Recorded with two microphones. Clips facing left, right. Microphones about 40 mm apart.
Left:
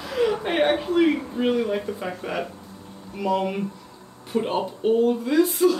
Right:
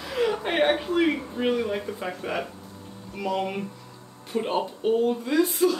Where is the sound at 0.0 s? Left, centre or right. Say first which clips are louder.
Left 2 dB; centre.